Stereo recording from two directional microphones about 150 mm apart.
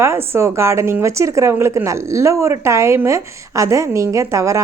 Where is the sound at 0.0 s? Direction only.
15° right (ahead or behind).